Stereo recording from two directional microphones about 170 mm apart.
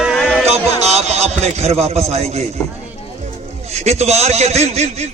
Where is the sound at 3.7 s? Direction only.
40° right (ahead or behind).